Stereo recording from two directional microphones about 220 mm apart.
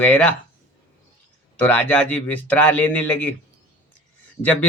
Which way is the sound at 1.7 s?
5° left (ahead or behind).